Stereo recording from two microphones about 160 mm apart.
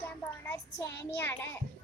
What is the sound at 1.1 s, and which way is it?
Child singing, 15° left (ahead or behind).